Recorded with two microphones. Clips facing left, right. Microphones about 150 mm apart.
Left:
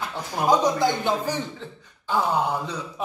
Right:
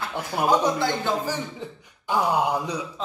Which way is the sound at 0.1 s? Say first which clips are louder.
Right 4 dB; 10° right (ahead or behind).